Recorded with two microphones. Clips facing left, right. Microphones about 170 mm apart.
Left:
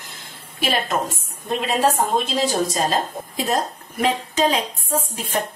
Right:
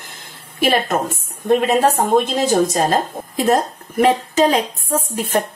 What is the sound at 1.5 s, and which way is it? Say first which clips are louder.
Speech: right 6 dB; 50° right (ahead or behind).